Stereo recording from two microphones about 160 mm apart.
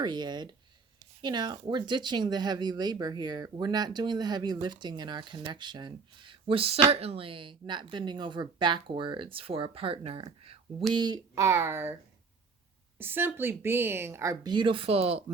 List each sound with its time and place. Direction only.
0.0 s speech: 25° right (ahead or behind)
10.9 s speech: 25° right (ahead or behind)
13.0 s speech: 15° right (ahead or behind); by 15.2 s 40° right (ahead or behind)